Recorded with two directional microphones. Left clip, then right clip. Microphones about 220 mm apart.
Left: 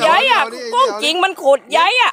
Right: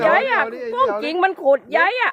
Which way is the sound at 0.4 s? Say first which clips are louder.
Left 2 dB; 15° left (ahead or behind).